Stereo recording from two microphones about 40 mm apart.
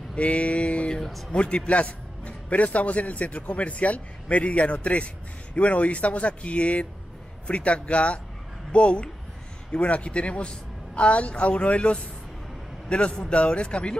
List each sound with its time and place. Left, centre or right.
0.1 s a man's voice: left
0.8 s speech: centre
1.3 s a man's voice: left